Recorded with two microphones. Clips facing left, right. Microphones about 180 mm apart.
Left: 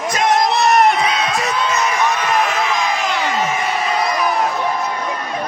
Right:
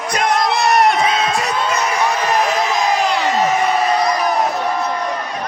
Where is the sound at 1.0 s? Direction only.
35° right (ahead or behind).